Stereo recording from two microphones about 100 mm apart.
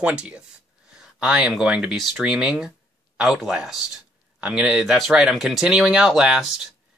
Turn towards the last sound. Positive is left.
turn(degrees=-5)  # may be behind; listen again after turning